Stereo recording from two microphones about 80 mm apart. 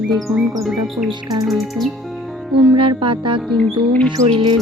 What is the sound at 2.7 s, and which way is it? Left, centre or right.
Music, right.